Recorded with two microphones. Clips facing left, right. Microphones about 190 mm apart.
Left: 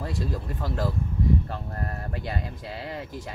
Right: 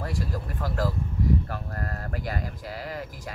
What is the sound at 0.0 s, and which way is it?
Speech, 20° left (ahead or behind).